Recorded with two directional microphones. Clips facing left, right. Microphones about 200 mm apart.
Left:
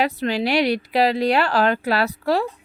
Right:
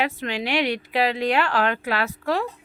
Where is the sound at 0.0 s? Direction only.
35° left (ahead or behind).